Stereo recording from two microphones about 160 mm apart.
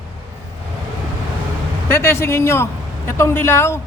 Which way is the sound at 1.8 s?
15° left (ahead or behind).